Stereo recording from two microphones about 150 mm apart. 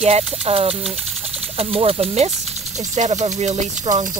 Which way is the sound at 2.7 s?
50° right (ahead or behind).